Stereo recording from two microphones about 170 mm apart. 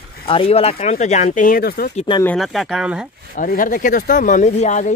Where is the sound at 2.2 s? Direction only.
Centre (ahead or behind).